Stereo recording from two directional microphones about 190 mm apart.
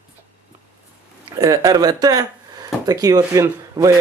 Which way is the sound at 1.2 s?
20° right (ahead or behind).